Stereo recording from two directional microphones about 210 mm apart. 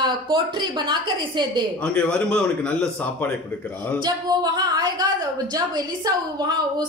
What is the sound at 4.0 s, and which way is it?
Speech, 20° right (ahead or behind).